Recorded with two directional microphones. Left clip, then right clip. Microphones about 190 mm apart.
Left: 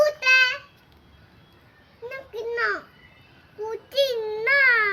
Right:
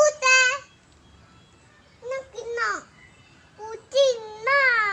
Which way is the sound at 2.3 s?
5° right (ahead or behind).